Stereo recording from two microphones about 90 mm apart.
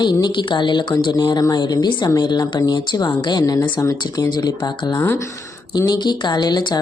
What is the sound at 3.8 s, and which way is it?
Speech, 35° left (ahead or behind).